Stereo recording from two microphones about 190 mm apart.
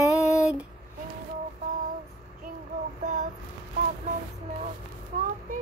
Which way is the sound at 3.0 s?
40° right (ahead or behind).